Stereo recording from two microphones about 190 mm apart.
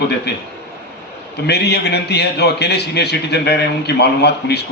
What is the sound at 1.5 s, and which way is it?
A man's voice, 60° left (ahead or behind).